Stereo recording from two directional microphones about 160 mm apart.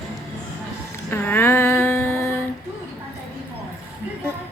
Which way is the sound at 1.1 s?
10° left (ahead or behind).